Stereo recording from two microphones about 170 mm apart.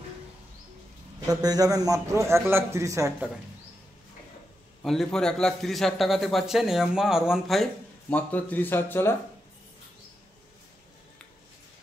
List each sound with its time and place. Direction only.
1.2 s a man's voice: 20° right (ahead or behind)
4.8 s a man's voice: centre (ahead or behind)